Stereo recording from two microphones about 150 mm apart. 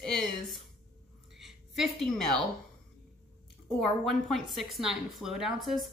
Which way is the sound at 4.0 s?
Centre (ahead or behind).